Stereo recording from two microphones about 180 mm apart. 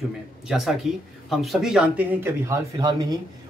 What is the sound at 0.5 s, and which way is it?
Speech, centre (ahead or behind).